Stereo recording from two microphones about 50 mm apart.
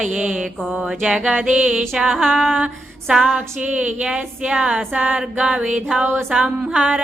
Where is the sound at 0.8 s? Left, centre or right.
Centre.